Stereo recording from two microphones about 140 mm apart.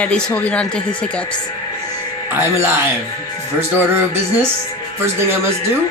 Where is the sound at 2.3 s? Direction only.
15° right (ahead or behind).